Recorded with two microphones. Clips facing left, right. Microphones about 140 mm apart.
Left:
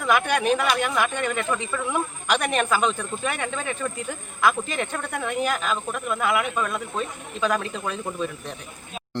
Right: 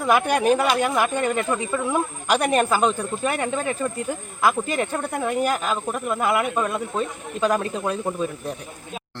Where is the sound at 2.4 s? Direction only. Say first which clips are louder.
Right 4 dB; 35° right (ahead or behind).